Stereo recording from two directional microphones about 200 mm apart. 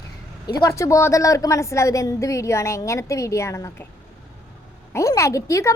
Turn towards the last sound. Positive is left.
turn(degrees=15)  # may be behind; listen again after turning